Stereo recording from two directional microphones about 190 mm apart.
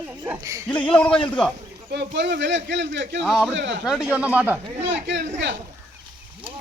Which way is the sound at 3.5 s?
70° right (ahead or behind).